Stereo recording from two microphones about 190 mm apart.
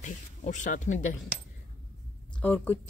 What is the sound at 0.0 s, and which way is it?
A woman's voice, 40° left (ahead or behind).